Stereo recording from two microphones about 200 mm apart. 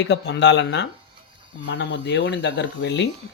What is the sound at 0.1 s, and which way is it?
Speech, 60° left (ahead or behind).